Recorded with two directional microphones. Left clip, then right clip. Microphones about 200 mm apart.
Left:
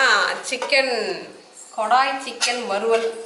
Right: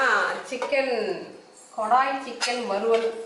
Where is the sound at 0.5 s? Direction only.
5° right (ahead or behind).